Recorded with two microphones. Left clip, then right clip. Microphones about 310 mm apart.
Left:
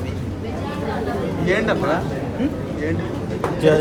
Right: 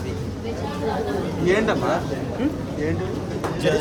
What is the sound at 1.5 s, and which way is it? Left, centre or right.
Speech, right.